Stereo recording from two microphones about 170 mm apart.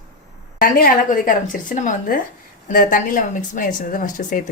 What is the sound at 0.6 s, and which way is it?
A woman's voice, 55° left (ahead or behind).